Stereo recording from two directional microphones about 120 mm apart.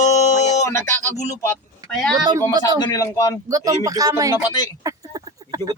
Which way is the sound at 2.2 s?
35° right (ahead or behind).